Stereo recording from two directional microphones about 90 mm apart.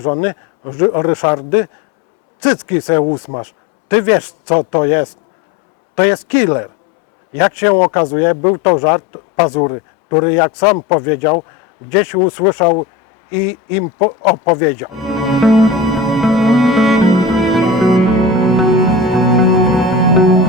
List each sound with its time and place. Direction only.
0.0 s speech: 20° left (ahead or behind)
6.2 s speech: 15° left (ahead or behind)
15.0 s music: centre (ahead or behind)